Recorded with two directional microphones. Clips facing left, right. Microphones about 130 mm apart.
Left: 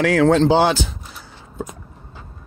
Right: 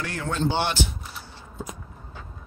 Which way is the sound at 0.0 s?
90° left.